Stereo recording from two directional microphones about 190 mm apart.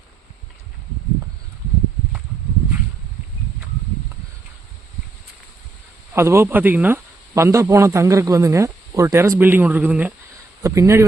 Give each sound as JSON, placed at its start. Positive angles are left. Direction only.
{"t": 6.1, "sound": "speech", "side_deg": -15}